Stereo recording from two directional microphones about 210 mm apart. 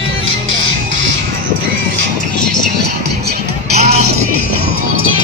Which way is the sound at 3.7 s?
30° right (ahead or behind).